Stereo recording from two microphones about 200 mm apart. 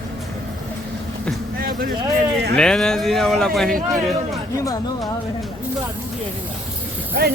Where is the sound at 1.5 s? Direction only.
45° right (ahead or behind).